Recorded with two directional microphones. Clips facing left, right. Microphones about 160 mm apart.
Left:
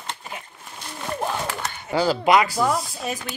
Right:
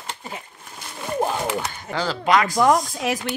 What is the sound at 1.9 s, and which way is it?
Speech, 10° left (ahead or behind).